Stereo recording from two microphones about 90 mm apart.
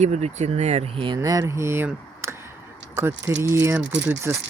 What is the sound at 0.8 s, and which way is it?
Speech, 90° right.